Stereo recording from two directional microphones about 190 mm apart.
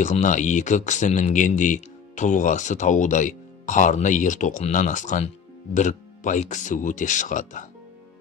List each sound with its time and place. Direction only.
0.0 s speech: 40° left (ahead or behind)